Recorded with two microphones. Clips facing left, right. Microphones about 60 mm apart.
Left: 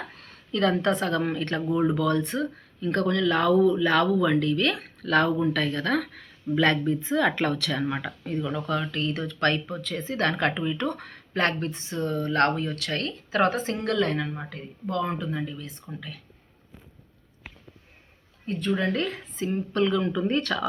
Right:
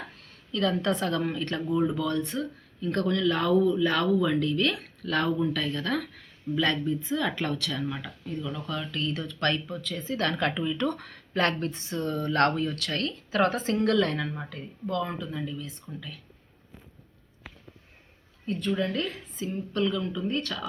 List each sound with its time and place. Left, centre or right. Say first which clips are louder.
0.5 s speech: left 3 dB; left
8.4 s speech: left 6 dB; left
14.5 s speech: left 1 dB; left
18.4 s speech: left 2 dB; left